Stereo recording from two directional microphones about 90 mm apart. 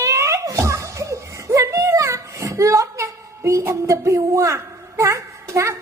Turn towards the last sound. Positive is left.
turn(degrees=-30)  # may be behind; listen again after turning